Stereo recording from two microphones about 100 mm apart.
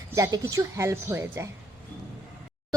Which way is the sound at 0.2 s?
35° right (ahead or behind).